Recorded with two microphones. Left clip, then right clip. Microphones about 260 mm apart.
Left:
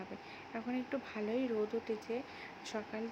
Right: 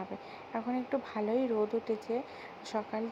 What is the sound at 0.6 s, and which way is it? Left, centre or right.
Speech, centre.